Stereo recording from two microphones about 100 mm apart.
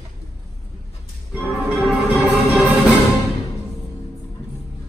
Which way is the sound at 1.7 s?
10° right (ahead or behind).